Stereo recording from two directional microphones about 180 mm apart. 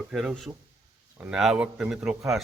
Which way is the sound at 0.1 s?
5° right (ahead or behind).